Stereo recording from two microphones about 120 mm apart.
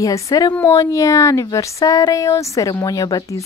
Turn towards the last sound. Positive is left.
turn(degrees=30)  # may be behind; listen again after turning